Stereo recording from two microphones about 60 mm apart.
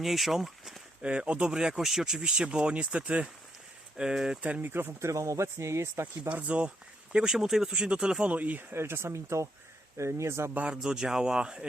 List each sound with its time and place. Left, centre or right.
0.0 s speech: centre
1.0 s speech: centre
3.9 s speech: centre
4.4 s speech: right
4.7 s speech: right
4.9 s speech: right
6.2 s speech: right
7.3 s speech: centre; by 8.6 s right
8.7 s speech: right
10.5 s speech: right
10.8 s speech: centre